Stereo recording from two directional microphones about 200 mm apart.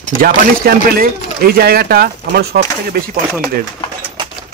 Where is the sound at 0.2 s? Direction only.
45° right (ahead or behind).